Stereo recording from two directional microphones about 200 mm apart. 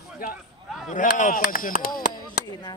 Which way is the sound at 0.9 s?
40° left (ahead or behind).